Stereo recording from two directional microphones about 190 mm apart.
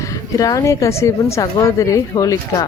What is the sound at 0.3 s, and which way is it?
A woman's voice, 20° left (ahead or behind).